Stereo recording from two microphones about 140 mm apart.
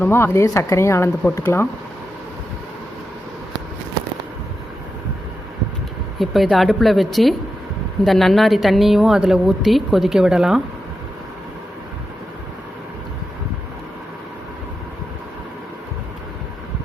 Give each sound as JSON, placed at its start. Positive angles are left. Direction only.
{"t": 0.0, "sound": "speech", "side_deg": 15}
{"t": 6.1, "sound": "a woman's voice", "side_deg": 0}